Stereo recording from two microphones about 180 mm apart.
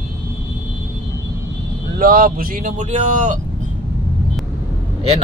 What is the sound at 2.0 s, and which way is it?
Speech, 55° right (ahead or behind).